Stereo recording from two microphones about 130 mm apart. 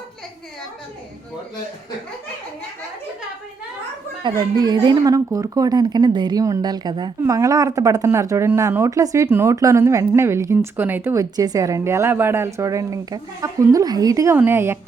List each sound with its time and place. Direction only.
4.2 s a woman's voice: 30° right (ahead or behind)